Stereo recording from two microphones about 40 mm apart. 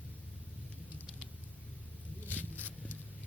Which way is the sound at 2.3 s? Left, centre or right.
Left.